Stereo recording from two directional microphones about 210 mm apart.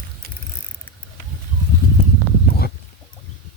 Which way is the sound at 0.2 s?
45° right (ahead or behind).